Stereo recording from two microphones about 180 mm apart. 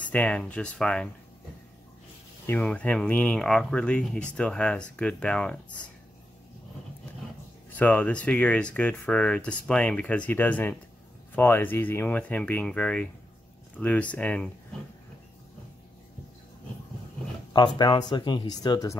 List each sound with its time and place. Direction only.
0.0 s speech: 5° left (ahead or behind)
2.4 s speech: 10° left (ahead or behind)
7.7 s speech: 10° left (ahead or behind)
17.7 s speech: 25° left (ahead or behind)